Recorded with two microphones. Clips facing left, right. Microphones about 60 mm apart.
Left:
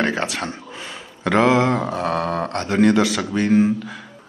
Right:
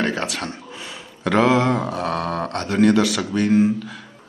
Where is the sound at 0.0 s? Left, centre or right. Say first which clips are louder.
Left 1 dB; centre.